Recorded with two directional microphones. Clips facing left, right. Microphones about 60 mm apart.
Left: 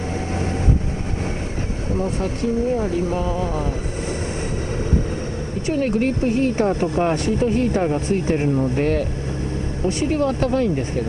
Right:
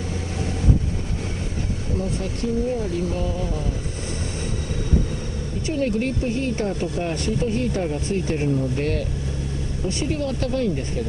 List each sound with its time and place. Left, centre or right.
2.8 s speech: left
5.7 s speech: left